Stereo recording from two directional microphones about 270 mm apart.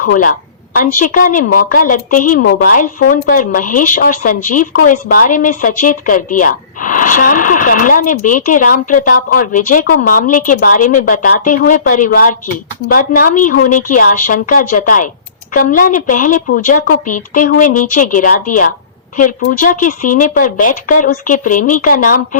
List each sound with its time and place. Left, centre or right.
0.0 s a woman's voice: left